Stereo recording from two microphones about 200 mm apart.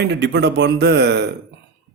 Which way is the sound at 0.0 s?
60° right (ahead or behind).